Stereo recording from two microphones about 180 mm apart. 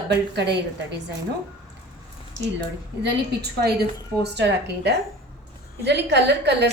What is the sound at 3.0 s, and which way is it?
A woman's voice, 70° right (ahead or behind).